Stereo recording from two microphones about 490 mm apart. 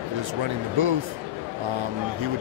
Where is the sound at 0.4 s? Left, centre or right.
Right.